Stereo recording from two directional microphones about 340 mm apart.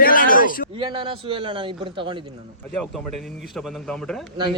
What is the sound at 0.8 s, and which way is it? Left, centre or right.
A man's voice, centre.